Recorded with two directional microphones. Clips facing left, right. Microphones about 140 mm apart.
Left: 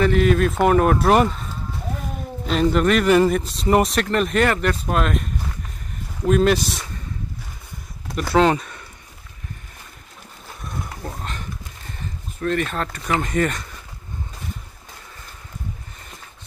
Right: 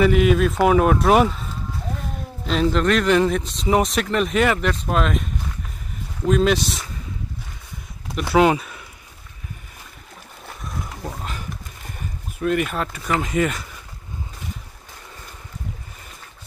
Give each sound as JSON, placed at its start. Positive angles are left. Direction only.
{"t": 0.0, "sound": "speech", "side_deg": -5}
{"t": 2.4, "sound": "speech", "side_deg": 0}
{"t": 8.1, "sound": "speech", "side_deg": -5}
{"t": 10.6, "sound": "a sound", "side_deg": 0}
{"t": 12.4, "sound": "speech", "side_deg": -10}